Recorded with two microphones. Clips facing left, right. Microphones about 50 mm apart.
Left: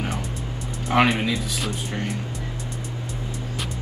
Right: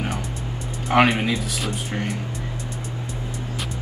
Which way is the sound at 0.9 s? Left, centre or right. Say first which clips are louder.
Right 2 dB; centre.